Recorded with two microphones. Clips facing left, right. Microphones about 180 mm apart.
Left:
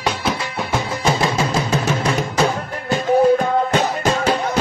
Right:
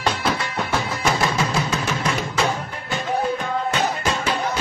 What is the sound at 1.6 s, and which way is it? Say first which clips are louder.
Music: left 4 dB; 35° left (ahead or behind).